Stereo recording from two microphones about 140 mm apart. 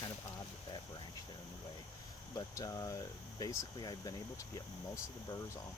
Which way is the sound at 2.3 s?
25° left (ahead or behind).